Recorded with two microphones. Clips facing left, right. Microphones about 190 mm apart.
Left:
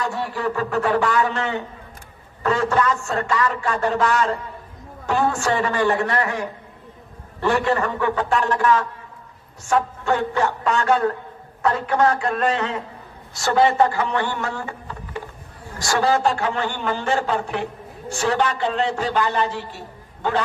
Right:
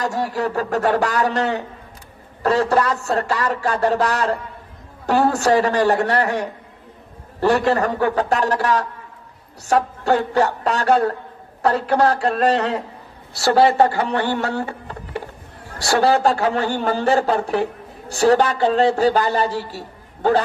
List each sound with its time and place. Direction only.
0.0 s a man's voice: 40° right (ahead or behind)
15.8 s a man's voice: 35° right (ahead or behind)